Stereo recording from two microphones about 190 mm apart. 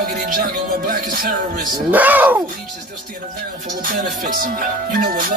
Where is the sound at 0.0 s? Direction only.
50° right (ahead or behind).